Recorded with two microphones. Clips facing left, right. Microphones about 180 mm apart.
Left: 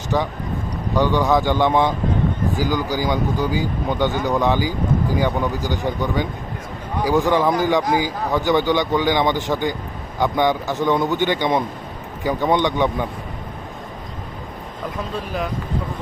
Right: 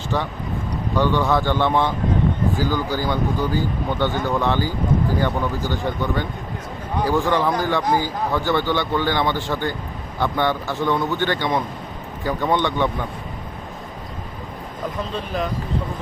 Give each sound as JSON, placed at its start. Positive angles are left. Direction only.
{"t": 0.1, "sound": "speech", "side_deg": 10}